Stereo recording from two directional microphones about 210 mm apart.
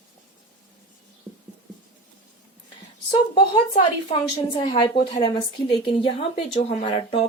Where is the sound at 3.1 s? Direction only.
25° left (ahead or behind).